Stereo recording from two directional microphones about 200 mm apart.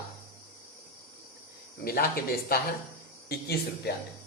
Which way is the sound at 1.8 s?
50° left (ahead or behind).